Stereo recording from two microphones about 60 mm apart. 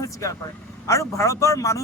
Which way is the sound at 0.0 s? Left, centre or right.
Left.